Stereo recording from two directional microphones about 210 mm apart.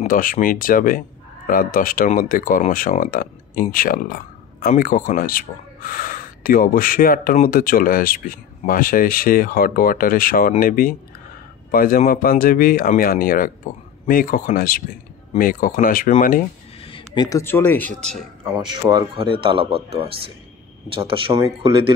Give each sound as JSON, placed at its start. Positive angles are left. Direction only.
{"t": 0.0, "sound": "speech", "side_deg": 40}
{"t": 16.8, "sound": "speech", "side_deg": 25}
{"t": 18.9, "sound": "speech", "side_deg": -20}